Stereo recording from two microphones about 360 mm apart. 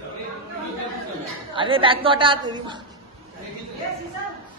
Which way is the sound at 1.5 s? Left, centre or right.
Centre.